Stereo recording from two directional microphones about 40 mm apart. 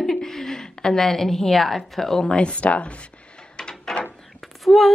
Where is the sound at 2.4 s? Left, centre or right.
Left.